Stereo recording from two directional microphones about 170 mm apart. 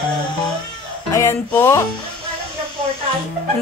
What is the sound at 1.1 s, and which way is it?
Music, 15° left (ahead or behind).